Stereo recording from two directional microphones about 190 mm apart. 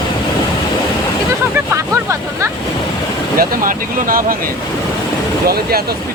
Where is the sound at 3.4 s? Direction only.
50° right (ahead or behind).